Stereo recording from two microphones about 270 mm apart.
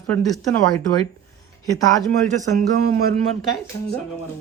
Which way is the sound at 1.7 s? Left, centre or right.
Centre.